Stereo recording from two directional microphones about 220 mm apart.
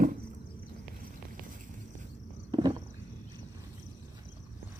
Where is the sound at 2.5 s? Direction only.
20° right (ahead or behind).